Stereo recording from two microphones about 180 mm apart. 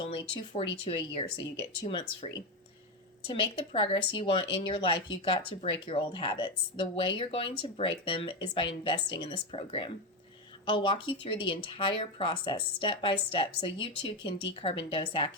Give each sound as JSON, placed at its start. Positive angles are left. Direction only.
{"t": 0.0, "sound": "speech", "side_deg": 25}